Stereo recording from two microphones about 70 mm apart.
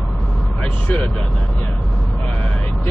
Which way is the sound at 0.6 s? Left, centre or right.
Centre.